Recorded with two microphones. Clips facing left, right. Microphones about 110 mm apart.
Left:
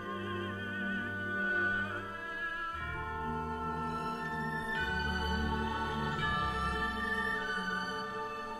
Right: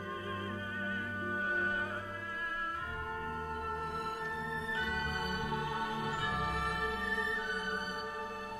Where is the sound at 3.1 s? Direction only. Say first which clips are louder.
Left 5 dB; 5° left (ahead or behind).